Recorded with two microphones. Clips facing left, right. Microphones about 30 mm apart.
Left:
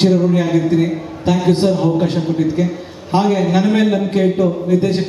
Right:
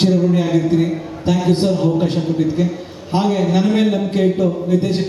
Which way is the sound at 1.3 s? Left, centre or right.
Centre.